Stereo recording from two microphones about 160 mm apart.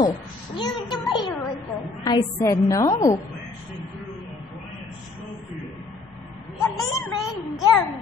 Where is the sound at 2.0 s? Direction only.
25° left (ahead or behind).